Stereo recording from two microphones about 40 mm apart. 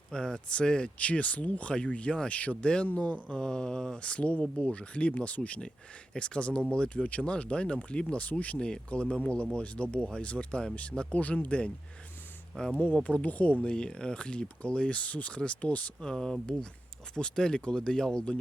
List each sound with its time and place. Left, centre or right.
0.1 s speech: centre
0.9 s speech: left
3.3 s speech: centre
4.0 s speech: left
8.5 s speech: left
12.8 s speech: left
13.6 s speech: left
16.0 s speech: centre